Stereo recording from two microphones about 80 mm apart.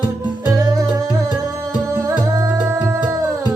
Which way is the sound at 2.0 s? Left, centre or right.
Right.